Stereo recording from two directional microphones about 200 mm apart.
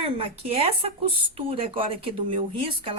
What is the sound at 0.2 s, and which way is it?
A woman's voice, 30° right (ahead or behind).